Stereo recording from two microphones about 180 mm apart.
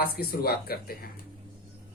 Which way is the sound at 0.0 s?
60° left (ahead or behind).